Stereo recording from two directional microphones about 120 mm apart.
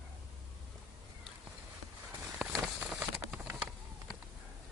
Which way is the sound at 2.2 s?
5° right (ahead or behind).